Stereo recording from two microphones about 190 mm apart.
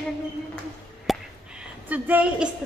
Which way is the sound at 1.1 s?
Centre (ahead or behind).